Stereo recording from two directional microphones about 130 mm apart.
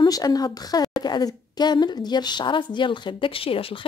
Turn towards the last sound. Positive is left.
turn(degrees=45)  # may be behind; listen again after turning